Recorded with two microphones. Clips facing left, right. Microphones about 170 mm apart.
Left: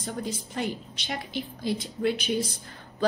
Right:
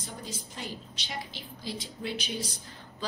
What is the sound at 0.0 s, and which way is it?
A woman's voice, 55° left (ahead or behind).